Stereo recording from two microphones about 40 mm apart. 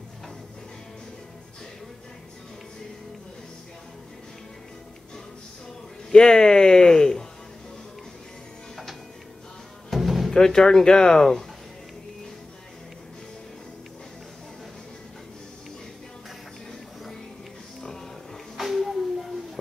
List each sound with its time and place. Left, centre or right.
6.1 s speech: centre
9.8 s music: centre
10.3 s speech: centre
18.6 s a sound: centre